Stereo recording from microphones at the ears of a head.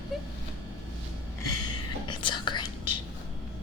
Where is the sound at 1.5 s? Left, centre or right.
Left.